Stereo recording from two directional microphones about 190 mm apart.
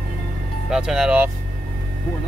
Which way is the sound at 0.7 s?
5° right (ahead or behind).